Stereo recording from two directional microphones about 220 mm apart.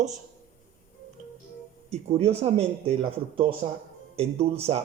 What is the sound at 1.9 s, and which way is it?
Speech, 30° right (ahead or behind).